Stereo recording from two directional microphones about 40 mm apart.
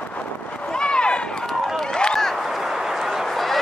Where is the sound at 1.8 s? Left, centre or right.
Centre.